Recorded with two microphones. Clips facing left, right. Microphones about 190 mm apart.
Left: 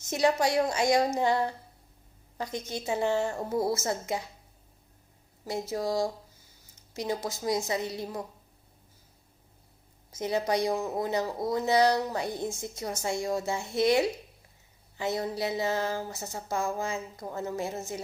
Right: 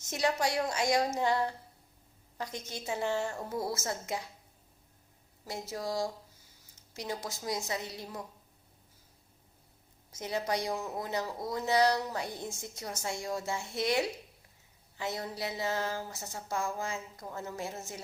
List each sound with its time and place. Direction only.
0.2 s a woman's voice: 25° left (ahead or behind)
3.3 s a woman's voice: 35° left (ahead or behind)
3.7 s a woman's voice: 20° left (ahead or behind)
5.5 s a woman's voice: 25° left (ahead or behind)
10.2 s a woman's voice: 25° left (ahead or behind)